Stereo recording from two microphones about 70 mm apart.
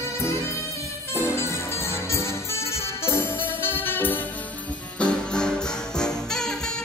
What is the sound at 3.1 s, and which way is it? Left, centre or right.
Music, left.